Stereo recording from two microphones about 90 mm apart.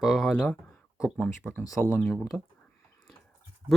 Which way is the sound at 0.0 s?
Centre (ahead or behind).